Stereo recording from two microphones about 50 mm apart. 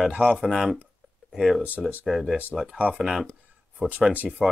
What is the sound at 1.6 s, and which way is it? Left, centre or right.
Speech, right.